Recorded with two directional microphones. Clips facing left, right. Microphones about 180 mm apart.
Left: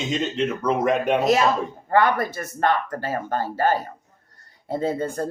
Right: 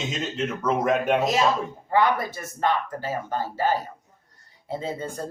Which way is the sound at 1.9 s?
55° left (ahead or behind).